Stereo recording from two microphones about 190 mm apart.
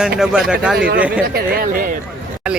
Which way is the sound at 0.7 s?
65° right (ahead or behind).